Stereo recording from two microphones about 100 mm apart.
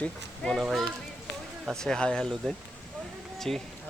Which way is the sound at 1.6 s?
5° left (ahead or behind).